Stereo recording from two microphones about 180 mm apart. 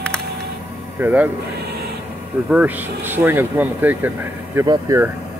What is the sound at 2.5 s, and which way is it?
Speech, 10° right (ahead or behind).